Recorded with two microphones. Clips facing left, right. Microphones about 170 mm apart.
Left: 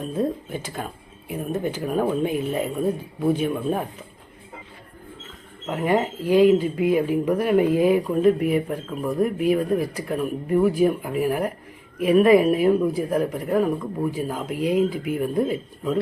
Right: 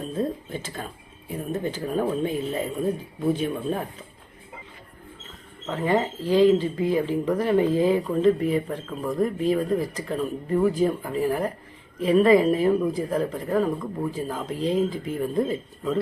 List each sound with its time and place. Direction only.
0.1 s a sound: 10° left (ahead or behind)
1.3 s speech: 15° left (ahead or behind)
5.6 s speech: 15° left (ahead or behind)